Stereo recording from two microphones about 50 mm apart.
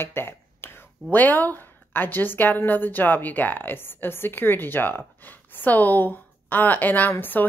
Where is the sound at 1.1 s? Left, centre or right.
Left.